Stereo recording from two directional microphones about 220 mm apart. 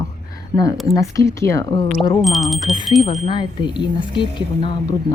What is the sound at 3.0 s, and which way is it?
Speech, 30° left (ahead or behind).